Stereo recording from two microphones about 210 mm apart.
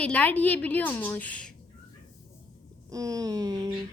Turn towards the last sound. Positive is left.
turn(degrees=-15)  # may be behind; listen again after turning